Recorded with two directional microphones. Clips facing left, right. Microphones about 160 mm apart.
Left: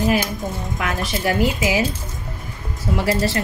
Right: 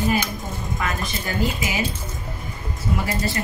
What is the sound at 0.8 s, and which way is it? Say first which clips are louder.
A woman's voice: left 6 dB; 85° left.